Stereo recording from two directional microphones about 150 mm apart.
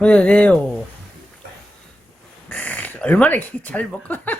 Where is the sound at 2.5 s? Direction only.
10° left (ahead or behind).